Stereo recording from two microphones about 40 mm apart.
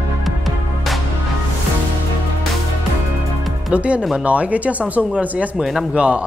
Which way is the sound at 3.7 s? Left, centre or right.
Right.